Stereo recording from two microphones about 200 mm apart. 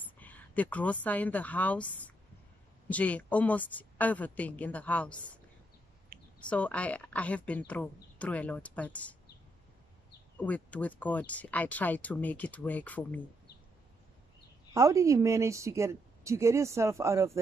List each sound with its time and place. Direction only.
0.2 s a sound: 10° left (ahead or behind)
1.0 s speech: 10° left (ahead or behind)
6.1 s a sound: 45° right (ahead or behind)
6.4 s speech: 5° left (ahead or behind)
10.3 s speech: 5° left (ahead or behind)
14.7 s a woman's voice: 15° right (ahead or behind)